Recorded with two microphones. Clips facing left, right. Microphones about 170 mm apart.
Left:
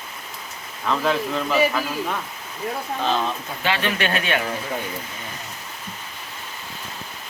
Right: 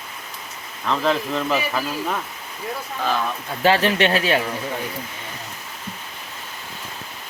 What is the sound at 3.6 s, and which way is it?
Speech, 35° right (ahead or behind).